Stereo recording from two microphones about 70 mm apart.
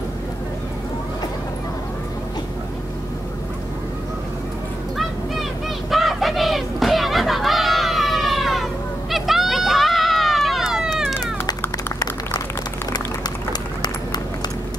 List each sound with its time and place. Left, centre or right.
4.9 s a sound: centre
9.1 s run: centre
12.9 s run: left